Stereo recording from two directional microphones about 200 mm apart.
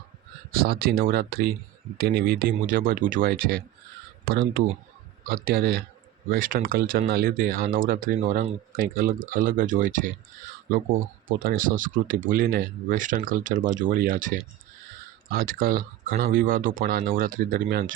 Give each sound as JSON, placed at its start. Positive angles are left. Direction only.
{"t": 0.6, "sound": "speech", "side_deg": -50}